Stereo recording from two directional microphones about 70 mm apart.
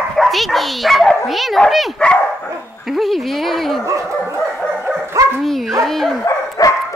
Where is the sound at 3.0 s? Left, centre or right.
Centre.